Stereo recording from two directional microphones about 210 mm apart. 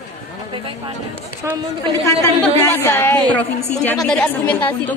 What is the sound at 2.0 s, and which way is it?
A woman's voice, 10° left (ahead or behind).